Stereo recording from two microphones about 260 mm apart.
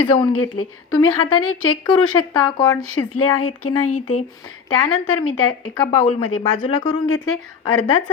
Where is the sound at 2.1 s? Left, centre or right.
Centre.